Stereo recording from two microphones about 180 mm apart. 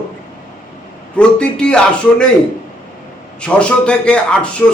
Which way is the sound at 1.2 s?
5° left (ahead or behind).